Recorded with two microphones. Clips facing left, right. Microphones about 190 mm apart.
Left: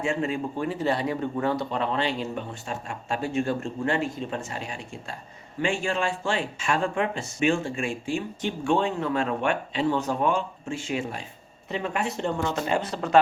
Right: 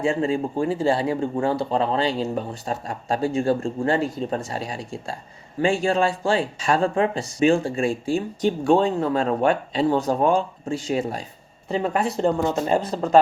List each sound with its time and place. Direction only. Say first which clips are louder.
0.0 s speech: right 5 dB; 30° right (ahead or behind)